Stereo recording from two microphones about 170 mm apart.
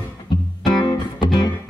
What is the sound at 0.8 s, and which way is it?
Music, 25° left (ahead or behind).